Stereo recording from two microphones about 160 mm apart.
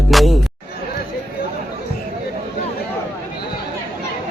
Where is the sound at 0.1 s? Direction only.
Centre (ahead or behind).